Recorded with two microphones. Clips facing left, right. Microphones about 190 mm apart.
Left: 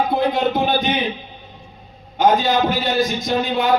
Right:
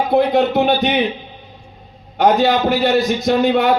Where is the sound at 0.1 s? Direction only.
65° right (ahead or behind).